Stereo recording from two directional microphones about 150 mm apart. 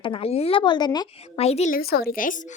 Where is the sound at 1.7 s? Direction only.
90° left.